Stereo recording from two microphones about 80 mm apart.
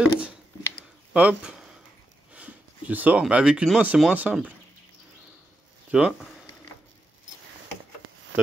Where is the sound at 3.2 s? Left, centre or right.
Centre.